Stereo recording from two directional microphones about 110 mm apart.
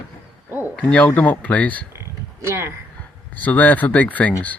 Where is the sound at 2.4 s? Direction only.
25° right (ahead or behind).